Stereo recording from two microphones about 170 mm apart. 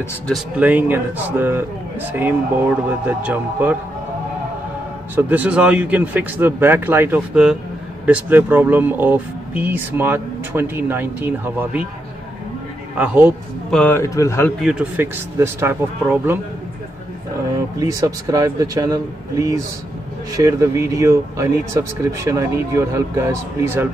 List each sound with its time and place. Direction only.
0.3 s speech: 10° right (ahead or behind)
5.1 s speech: 10° right (ahead or behind)
12.9 s speech: 10° right (ahead or behind)
13.7 s a man's voice: 10° left (ahead or behind)
14.6 s speech: 5° right (ahead or behind)
17.7 s speech: 20° right (ahead or behind)
20.3 s speech: 20° right (ahead or behind)